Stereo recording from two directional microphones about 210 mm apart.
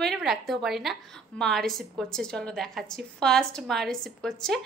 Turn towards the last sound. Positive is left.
turn(degrees=0)  # may be behind; listen again after turning